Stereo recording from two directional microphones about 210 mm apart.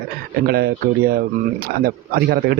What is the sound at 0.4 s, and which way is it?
Speech, 45° right (ahead or behind).